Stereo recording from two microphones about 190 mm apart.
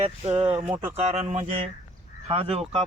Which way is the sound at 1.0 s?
35° right (ahead or behind).